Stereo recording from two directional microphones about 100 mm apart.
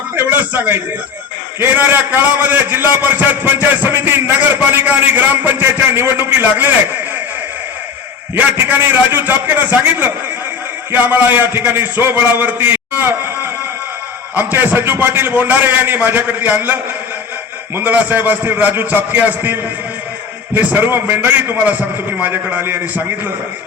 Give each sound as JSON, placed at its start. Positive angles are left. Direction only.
{"t": 0.2, "sound": "a sound", "side_deg": -20}
{"t": 1.5, "sound": "a man's voice", "side_deg": -20}
{"t": 8.7, "sound": "a man's voice", "side_deg": -20}
{"t": 14.3, "sound": "a man's voice", "side_deg": -20}